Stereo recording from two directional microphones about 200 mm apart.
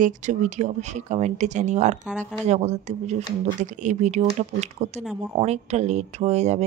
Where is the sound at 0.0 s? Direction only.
40° right (ahead or behind).